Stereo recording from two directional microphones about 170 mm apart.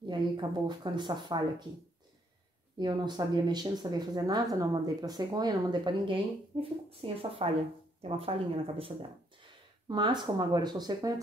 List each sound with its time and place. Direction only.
0.0 s speech: 25° right (ahead or behind)
2.8 s speech: 25° right (ahead or behind)